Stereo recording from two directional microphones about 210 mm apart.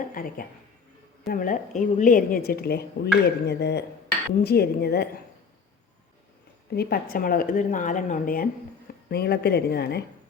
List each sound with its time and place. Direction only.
0.1 s a woman's voice: 40° left (ahead or behind)
6.7 s a woman's voice: 45° left (ahead or behind)